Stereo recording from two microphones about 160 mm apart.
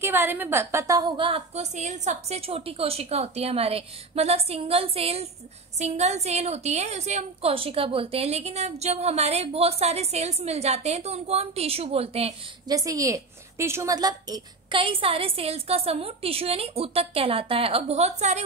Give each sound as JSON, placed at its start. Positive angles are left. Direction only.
{"t": 0.0, "sound": "a woman's voice", "side_deg": -15}
{"t": 1.2, "sound": "a woman's voice", "side_deg": -40}
{"t": 12.6, "sound": "a woman's voice", "side_deg": -20}